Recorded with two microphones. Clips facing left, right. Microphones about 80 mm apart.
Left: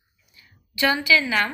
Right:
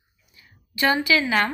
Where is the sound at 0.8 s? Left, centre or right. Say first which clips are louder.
Even; right.